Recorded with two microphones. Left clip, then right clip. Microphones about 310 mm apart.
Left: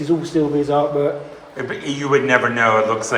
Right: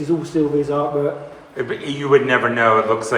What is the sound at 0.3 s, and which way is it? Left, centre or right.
A man's voice, centre.